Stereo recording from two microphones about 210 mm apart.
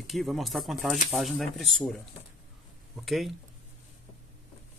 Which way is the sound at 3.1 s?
Centre (ahead or behind).